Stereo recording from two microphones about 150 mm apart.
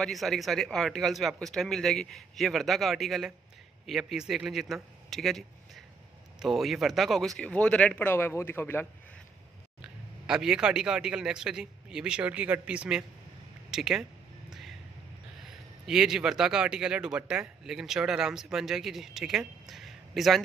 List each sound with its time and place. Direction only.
0.0 s a man's voice: centre (ahead or behind)
6.4 s speech: centre (ahead or behind); by 8.8 s 15° left (ahead or behind)
10.2 s a man's voice: 5° right (ahead or behind)
15.4 s a man's voice: 5° right (ahead or behind)